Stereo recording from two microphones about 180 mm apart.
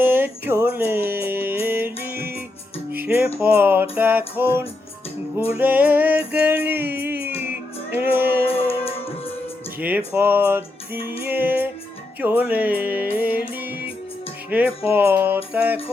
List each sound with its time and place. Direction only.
0.0 s music: 10° right (ahead or behind)
8.5 s music: 30° left (ahead or behind)
10.1 s music: 10° right (ahead or behind)